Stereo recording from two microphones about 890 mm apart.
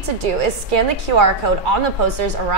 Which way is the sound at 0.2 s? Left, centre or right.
Right.